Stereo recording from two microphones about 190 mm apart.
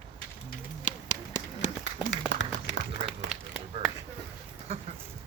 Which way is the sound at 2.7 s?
70° left (ahead or behind).